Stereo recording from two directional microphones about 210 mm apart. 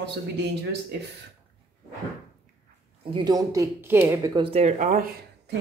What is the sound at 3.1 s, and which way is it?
Speech, 20° right (ahead or behind).